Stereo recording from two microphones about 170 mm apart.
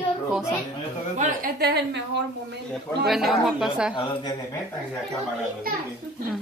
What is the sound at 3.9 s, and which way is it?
Speech, 30° left (ahead or behind).